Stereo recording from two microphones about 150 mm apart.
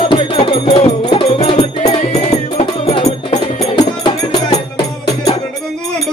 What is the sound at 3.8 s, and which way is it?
Music, 25° left (ahead or behind).